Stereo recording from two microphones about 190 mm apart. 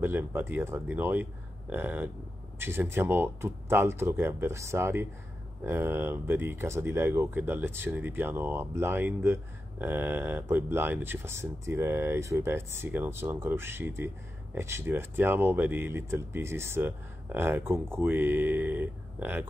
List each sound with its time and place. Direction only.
0.0 s speech: 10° right (ahead or behind)